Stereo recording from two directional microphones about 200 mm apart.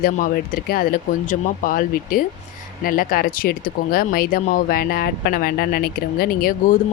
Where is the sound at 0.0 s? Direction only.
45° left (ahead or behind).